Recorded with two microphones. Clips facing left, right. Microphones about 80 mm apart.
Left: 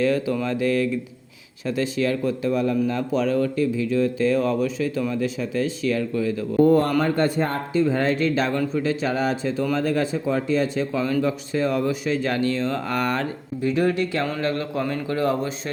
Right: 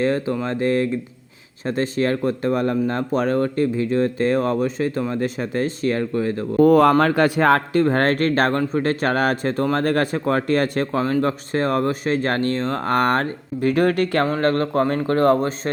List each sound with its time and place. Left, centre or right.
0.0 s speech: right
6.6 s speech: right
7.0 s speech: right
14.3 s speech: right